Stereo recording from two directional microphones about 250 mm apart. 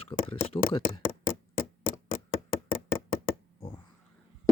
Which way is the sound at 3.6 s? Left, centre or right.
Left.